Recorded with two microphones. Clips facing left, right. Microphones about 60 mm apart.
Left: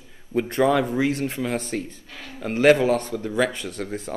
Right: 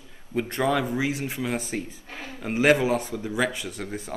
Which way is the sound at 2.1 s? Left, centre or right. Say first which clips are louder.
Right 2 dB; right.